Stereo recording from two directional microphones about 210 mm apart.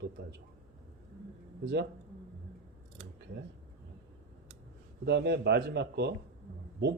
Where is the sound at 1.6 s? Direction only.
55° right (ahead or behind).